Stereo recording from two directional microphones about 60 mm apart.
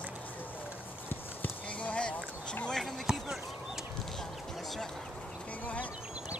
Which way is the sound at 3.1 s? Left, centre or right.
Centre.